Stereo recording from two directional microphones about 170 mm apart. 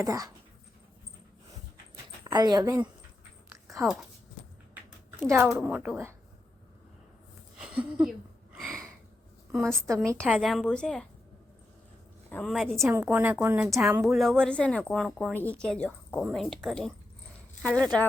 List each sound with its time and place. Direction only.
0.0 s speech: 20° right (ahead or behind)
2.2 s speech: 25° right (ahead or behind)
3.5 s a sound: 20° right (ahead or behind)
5.2 s a woman's voice: 15° right (ahead or behind)
7.6 s speech: 5° right (ahead or behind)
8.5 s a sound: centre (ahead or behind)
9.5 s speech: centre (ahead or behind)
12.3 s speech: 5° left (ahead or behind)
12.8 s a woman's voice: 15° right (ahead or behind)
14.0 s speech: centre (ahead or behind)